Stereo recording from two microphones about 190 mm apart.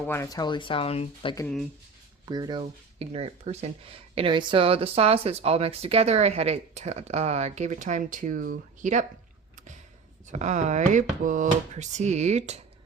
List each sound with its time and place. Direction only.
0.1 s speech: 15° left (ahead or behind)
2.2 s speech: 20° right (ahead or behind); by 9.0 s 40° right (ahead or behind)
10.2 s speech: 40° right (ahead or behind)